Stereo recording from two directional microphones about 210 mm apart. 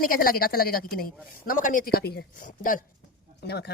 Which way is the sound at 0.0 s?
45° left (ahead or behind).